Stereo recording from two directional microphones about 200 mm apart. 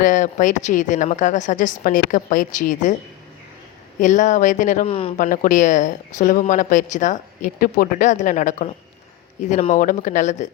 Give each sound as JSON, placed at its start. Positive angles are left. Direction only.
{"t": 0.0, "sound": "speech", "side_deg": 40}
{"t": 4.0, "sound": "speech", "side_deg": 40}
{"t": 5.1, "sound": "speech", "side_deg": 40}